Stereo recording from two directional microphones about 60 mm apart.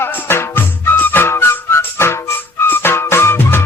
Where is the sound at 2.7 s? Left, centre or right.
Left.